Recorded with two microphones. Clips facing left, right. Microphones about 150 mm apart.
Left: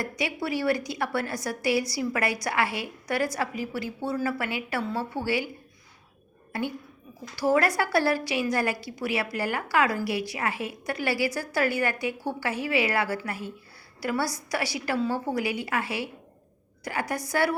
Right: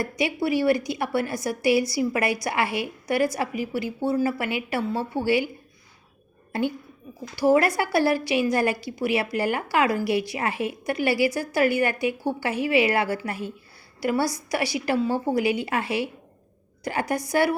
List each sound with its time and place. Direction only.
0.0 s a woman's voice: 15° right (ahead or behind)
7.3 s a woman's voice: 15° right (ahead or behind)